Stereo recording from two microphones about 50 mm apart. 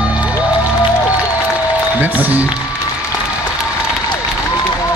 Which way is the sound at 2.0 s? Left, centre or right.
Right.